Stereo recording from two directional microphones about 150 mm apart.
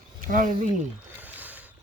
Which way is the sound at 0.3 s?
65° right (ahead or behind).